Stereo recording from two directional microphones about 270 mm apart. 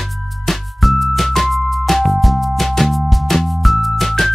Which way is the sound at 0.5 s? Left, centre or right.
Centre.